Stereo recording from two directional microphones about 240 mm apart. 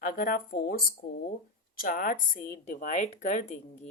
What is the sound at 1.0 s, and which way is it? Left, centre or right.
A woman's voice, left.